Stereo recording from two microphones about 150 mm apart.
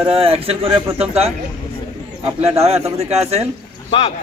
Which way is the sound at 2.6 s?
45° right (ahead or behind).